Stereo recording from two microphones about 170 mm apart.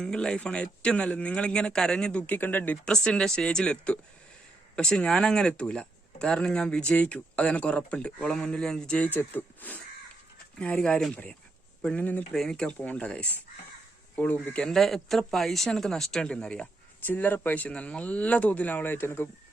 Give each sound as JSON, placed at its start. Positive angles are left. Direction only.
{"t": 0.0, "sound": "speech", "side_deg": 5}
{"t": 14.4, "sound": "speech", "side_deg": 5}